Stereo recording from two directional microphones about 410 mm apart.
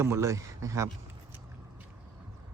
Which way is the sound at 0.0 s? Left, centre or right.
Centre.